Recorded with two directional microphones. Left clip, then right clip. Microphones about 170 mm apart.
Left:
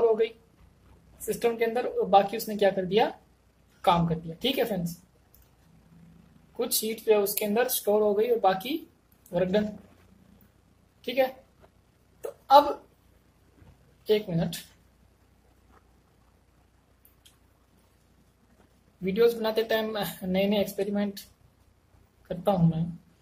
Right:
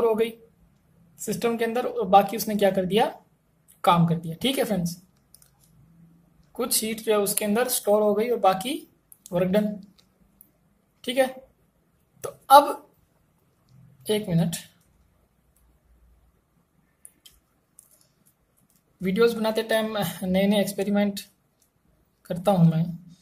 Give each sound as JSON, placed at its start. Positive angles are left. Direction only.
{"t": 0.0, "sound": "a sound", "side_deg": -15}
{"t": 1.2, "sound": "a woman's voice", "side_deg": -15}
{"t": 6.6, "sound": "speech", "side_deg": -15}
{"t": 11.0, "sound": "a woman's voice", "side_deg": -25}
{"t": 12.2, "sound": "a sound", "side_deg": -20}
{"t": 14.0, "sound": "a woman's voice", "side_deg": -20}
{"t": 19.0, "sound": "speech", "side_deg": -15}
{"t": 22.3, "sound": "a woman's voice", "side_deg": -20}